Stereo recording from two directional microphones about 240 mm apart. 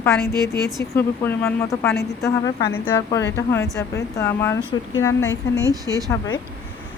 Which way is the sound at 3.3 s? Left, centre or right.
Centre.